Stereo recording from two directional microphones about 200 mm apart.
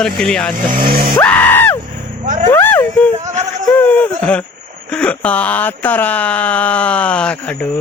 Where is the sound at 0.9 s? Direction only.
50° right (ahead or behind).